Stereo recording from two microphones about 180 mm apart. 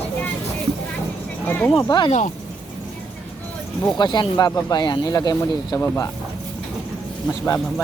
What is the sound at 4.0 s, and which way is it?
Speech, 25° left (ahead or behind).